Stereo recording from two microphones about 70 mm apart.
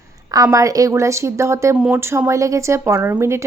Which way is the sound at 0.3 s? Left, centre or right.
Right.